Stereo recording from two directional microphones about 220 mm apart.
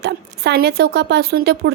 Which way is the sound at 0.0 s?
50° right (ahead or behind).